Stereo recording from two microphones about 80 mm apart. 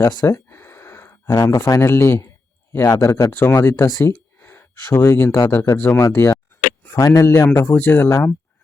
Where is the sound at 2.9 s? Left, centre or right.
Left.